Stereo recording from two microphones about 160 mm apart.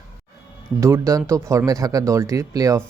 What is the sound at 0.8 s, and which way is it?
Speech, 20° right (ahead or behind).